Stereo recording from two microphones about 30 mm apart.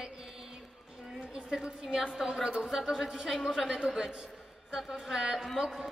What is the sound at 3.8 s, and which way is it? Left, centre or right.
Speech, right.